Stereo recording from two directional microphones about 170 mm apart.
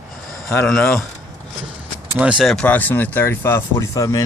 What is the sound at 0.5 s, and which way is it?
Speech, 10° left (ahead or behind).